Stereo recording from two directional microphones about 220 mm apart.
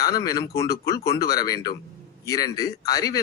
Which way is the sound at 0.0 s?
15° left (ahead or behind).